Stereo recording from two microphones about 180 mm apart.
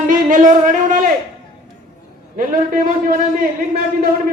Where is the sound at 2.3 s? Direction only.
50° right (ahead or behind).